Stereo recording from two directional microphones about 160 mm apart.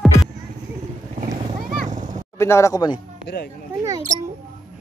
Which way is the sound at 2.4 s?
15° left (ahead or behind).